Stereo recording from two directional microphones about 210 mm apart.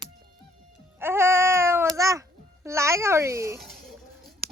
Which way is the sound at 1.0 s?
10° right (ahead or behind).